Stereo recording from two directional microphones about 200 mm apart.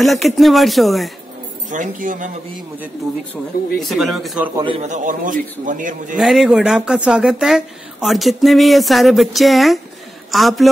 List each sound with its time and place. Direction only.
0.0 s speech: centre (ahead or behind)
1.7 s a man's voice: 40° right (ahead or behind)
3.7 s speech: centre (ahead or behind)
4.6 s a man's voice: 25° right (ahead or behind)
4.8 s a man's voice: 40° right (ahead or behind)
6.1 s speech: centre (ahead or behind)